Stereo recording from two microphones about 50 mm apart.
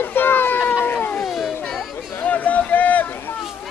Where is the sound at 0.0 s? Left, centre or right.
Left.